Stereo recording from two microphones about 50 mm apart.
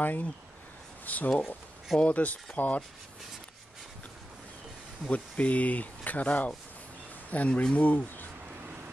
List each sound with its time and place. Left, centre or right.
0.0 s speech: left
5.0 s speech: left